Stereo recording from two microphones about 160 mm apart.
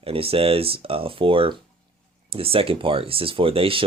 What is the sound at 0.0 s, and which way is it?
Speech, 35° right (ahead or behind).